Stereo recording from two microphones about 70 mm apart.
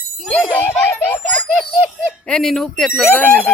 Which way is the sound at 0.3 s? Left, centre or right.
Left.